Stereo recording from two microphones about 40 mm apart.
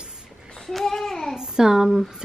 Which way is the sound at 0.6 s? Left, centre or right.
Centre.